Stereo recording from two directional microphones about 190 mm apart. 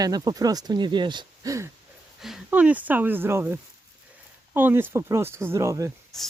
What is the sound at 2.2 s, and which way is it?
Speech, 5° right (ahead or behind).